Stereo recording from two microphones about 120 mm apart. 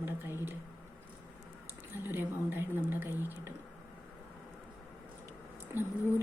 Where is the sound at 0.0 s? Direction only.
20° right (ahead or behind).